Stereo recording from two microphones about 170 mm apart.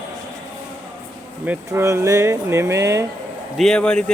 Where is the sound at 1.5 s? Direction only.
15° right (ahead or behind).